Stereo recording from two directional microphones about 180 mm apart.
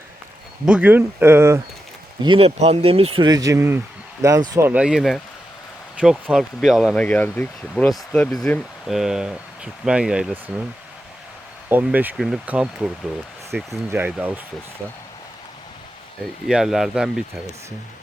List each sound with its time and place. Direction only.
0.6 s speech: 5° right (ahead or behind)
2.2 s speech: 30° right (ahead or behind)
4.7 s speech: 5° right (ahead or behind)
11.7 s speech: 10° right (ahead or behind)
16.5 s speech: centre (ahead or behind)